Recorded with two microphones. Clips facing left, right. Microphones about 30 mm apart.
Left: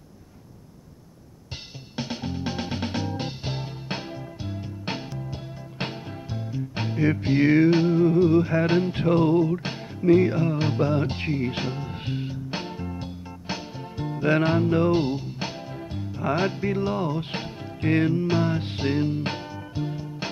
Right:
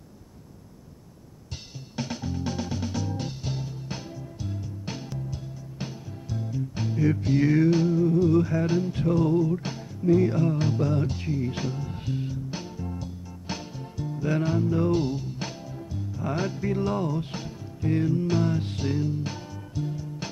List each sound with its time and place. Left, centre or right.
2.0 s music: left
6.3 s music: left
6.7 s music: left
10.3 s speech: left
13.5 s music: left
13.9 s music: left
14.9 s music: left
15.9 s music: left
17.7 s music: left
18.1 s music: left